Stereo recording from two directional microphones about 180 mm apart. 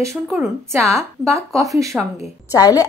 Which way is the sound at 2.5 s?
20° left (ahead or behind).